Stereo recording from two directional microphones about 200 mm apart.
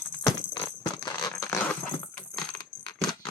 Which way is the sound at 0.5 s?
20° left (ahead or behind).